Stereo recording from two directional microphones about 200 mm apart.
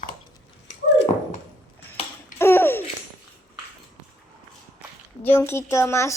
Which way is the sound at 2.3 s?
10° left (ahead or behind).